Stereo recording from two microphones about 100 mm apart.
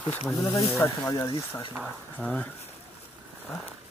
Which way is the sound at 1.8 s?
5° left (ahead or behind).